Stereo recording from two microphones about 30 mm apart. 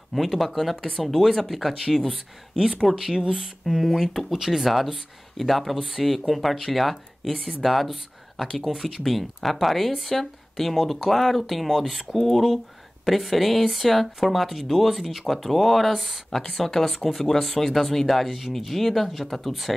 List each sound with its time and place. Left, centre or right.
0.1 s speech: centre
2.0 s speech: centre
2.7 s speech: centre
3.7 s speech: centre
4.0 s speech: centre
4.3 s speech: centre
4.9 s speech: centre
16.3 s speech: centre